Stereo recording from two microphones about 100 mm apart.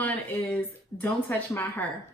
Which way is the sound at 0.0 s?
15° left (ahead or behind).